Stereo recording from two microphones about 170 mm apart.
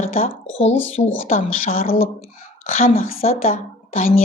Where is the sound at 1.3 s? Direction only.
55° left (ahead or behind).